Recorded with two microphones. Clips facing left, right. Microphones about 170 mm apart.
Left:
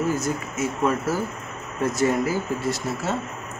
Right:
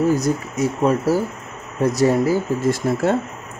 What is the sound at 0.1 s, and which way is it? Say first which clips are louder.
Speech: right 6 dB; 35° right (ahead or behind).